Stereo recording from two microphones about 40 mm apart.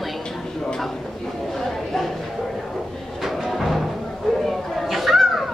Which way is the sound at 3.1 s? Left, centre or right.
Centre.